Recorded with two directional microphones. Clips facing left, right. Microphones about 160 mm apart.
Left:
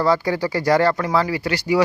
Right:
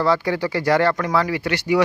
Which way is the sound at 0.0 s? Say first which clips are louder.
Left 1 dB; 40° left (ahead or behind).